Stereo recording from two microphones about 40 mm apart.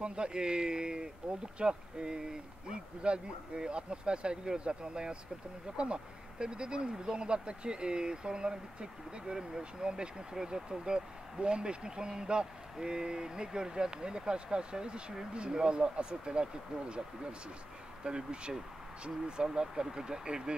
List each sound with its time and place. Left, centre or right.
0.0 s speech: right
18.0 s speech: right